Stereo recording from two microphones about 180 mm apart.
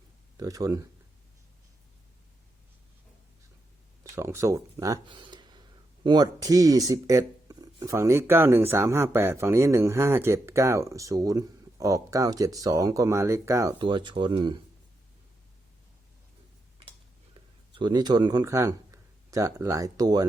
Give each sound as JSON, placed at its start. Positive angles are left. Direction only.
{"t": 0.3, "sound": "speech", "side_deg": -20}
{"t": 4.1, "sound": "speech", "side_deg": -15}
{"t": 17.3, "sound": "speech", "side_deg": -25}